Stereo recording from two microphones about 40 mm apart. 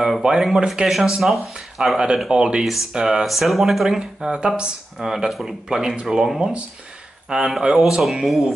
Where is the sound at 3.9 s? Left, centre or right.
Centre.